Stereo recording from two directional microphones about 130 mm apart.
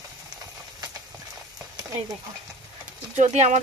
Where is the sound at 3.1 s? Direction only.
65° right (ahead or behind).